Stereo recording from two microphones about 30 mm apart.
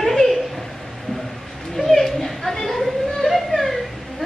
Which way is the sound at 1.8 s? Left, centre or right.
Centre.